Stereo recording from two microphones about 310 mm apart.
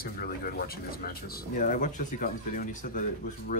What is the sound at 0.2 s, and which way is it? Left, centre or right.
Speech, left.